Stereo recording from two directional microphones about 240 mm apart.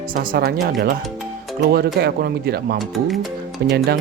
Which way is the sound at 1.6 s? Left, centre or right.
Right.